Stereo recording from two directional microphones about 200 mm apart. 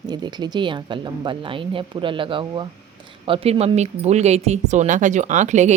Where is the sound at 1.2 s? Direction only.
25° right (ahead or behind).